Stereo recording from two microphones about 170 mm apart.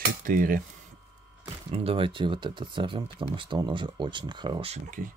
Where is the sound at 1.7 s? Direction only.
35° right (ahead or behind).